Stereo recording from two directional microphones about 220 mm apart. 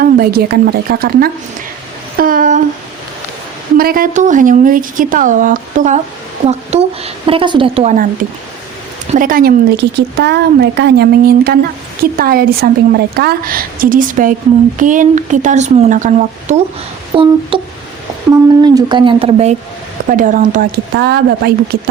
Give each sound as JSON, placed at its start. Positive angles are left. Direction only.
{"t": 0.0, "sound": "speech", "side_deg": -40}
{"t": 2.1, "sound": "a sound", "side_deg": -40}
{"t": 3.8, "sound": "a woman's voice", "side_deg": -40}
{"t": 9.1, "sound": "a woman's voice", "side_deg": -40}
{"t": 17.1, "sound": "a woman's voice", "side_deg": -25}
{"t": 17.5, "sound": "music", "side_deg": -20}
{"t": 18.6, "sound": "a woman's voice", "side_deg": -15}